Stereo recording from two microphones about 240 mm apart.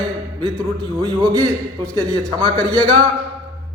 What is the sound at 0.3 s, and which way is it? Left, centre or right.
A man's voice, centre.